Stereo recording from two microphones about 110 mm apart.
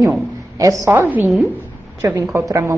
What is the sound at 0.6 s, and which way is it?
Speech, 30° right (ahead or behind).